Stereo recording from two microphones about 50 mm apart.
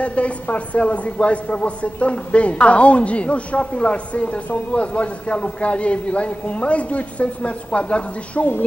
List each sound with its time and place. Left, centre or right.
0.0 s a man's voice: left